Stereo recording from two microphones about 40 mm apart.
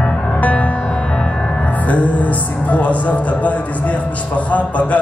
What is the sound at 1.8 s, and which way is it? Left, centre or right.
Music, left.